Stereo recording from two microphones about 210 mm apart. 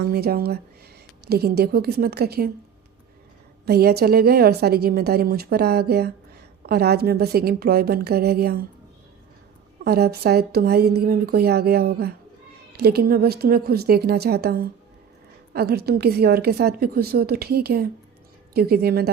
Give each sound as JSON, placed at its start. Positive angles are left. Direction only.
{"t": 0.0, "sound": "a woman's voice", "side_deg": -50}
{"t": 3.7, "sound": "a woman's voice", "side_deg": -50}
{"t": 9.8, "sound": "a woman's voice", "side_deg": -50}